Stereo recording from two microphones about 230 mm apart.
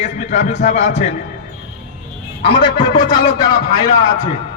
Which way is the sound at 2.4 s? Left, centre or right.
Left.